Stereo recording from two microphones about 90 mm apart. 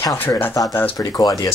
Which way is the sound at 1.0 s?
45° left (ahead or behind).